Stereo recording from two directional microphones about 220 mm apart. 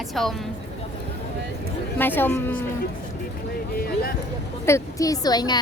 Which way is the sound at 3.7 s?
45° left (ahead or behind).